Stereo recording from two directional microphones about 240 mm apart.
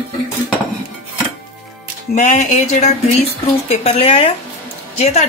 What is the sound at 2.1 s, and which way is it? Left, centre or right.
A woman's voice, left.